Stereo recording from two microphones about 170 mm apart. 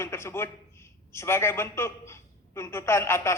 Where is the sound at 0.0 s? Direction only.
15° left (ahead or behind).